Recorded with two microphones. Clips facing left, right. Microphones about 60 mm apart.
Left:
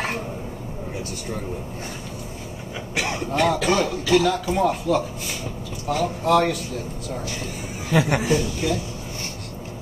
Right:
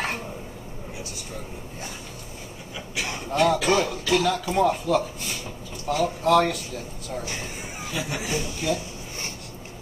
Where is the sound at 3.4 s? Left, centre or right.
Centre.